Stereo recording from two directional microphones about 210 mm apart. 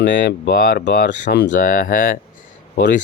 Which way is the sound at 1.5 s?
40° left (ahead or behind).